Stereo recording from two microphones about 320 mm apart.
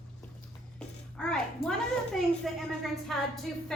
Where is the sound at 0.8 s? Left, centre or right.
Centre.